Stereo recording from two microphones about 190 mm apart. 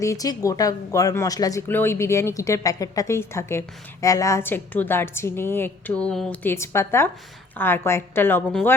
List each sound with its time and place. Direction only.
0.0 s speech: 15° left (ahead or behind)